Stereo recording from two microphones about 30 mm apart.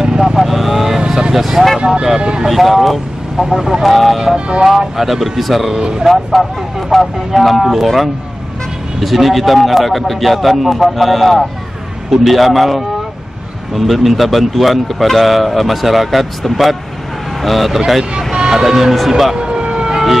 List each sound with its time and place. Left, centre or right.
0.4 s vehicle: centre
1.0 s vehicle: right
1.3 s speech: centre
2.1 s speech: right
2.5 s a man's voice: centre
5.7 s speech: right
6.4 s a man's voice: centre
19.3 s emergency vehicle: right